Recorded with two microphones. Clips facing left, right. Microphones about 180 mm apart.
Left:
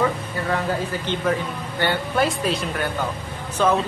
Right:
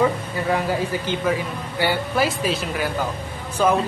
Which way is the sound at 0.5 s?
10° right (ahead or behind).